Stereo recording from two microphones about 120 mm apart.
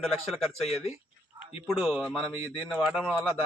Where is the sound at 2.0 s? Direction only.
5° left (ahead or behind).